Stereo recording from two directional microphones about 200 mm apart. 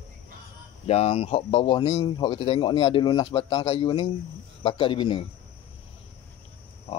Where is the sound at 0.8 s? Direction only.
30° left (ahead or behind).